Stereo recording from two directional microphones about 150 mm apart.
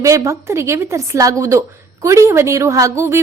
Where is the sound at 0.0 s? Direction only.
20° right (ahead or behind).